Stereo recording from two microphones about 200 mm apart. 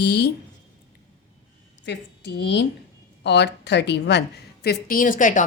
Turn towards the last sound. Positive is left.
turn(degrees=40)  # may be behind; listen again after turning